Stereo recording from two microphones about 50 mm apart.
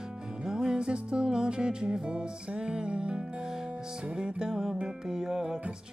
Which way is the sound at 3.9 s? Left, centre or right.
Centre.